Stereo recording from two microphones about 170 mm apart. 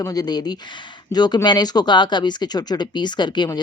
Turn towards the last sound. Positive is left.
turn(degrees=25)  # may be behind; listen again after turning